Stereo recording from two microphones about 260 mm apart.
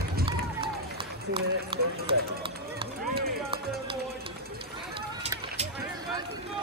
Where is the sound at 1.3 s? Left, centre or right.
Centre.